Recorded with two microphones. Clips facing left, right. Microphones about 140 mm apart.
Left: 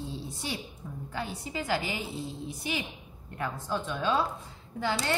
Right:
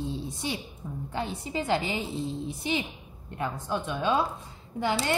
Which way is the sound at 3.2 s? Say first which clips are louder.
Right 2 dB; 20° right (ahead or behind).